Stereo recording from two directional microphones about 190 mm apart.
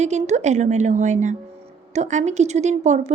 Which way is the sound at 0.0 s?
35° right (ahead or behind).